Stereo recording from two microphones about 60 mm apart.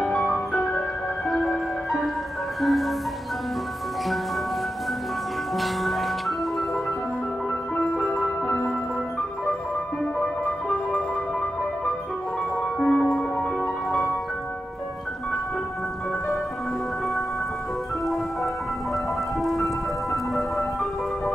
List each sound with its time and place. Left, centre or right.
0.0 s music: centre
5.6 s music: centre
10.2 s music: centre
12.7 s music: centre
19.4 s music: centre